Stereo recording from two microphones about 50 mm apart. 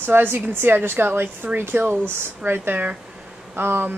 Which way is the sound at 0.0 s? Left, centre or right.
Right.